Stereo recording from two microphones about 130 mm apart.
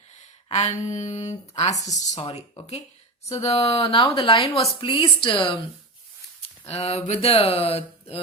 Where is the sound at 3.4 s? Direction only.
55° left (ahead or behind).